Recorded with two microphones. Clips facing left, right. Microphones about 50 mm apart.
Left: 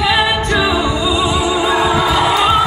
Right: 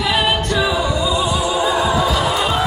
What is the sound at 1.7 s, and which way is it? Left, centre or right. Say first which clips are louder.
Music: left 3 dB; left.